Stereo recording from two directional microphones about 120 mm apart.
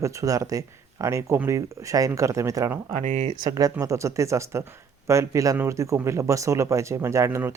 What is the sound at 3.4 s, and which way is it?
Speech, 30° right (ahead or behind).